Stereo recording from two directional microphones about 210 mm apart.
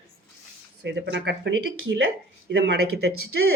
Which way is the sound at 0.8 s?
55° right (ahead or behind).